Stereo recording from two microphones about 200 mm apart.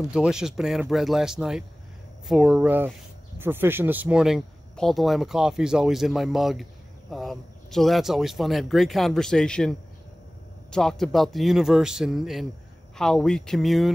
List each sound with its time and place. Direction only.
0.1 s speech: 5° right (ahead or behind)